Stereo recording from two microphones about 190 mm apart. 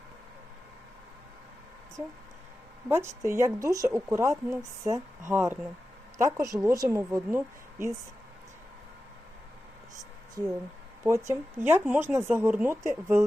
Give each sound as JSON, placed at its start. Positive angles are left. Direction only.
{"t": 2.0, "sound": "speech", "side_deg": -15}
{"t": 3.2, "sound": "speech", "side_deg": -15}
{"t": 10.4, "sound": "speech", "side_deg": -15}